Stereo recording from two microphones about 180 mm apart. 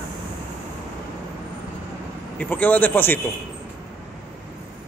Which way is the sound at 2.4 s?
10° left (ahead or behind).